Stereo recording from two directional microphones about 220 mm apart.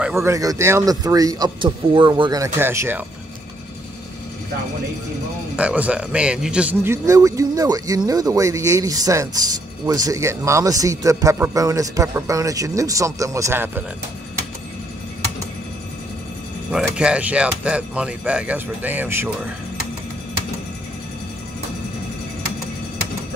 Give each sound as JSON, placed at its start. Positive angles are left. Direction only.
{"t": 0.0, "sound": "a man's voice", "side_deg": -10}
{"t": 5.6, "sound": "a man's voice", "side_deg": -5}
{"t": 16.7, "sound": "speech", "side_deg": -5}